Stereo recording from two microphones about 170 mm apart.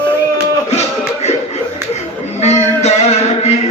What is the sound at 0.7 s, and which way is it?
Music, 40° left (ahead or behind).